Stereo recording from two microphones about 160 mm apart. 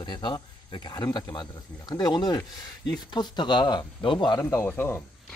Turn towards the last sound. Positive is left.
turn(degrees=15)  # may be behind; listen again after turning